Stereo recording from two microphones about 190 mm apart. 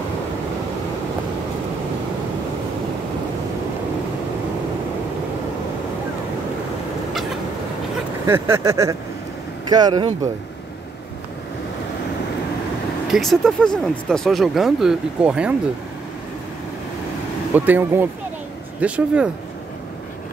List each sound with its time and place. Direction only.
8.3 s vehicle: 15° right (ahead or behind)
9.7 s speech: 20° right (ahead or behind)
13.1 s speech: centre (ahead or behind)
17.6 s vehicle: 10° right (ahead or behind)